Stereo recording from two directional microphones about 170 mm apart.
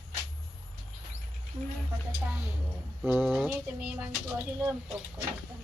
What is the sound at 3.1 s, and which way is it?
Speech, centre (ahead or behind).